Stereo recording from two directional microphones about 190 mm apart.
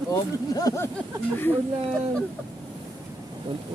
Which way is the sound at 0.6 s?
20° left (ahead or behind).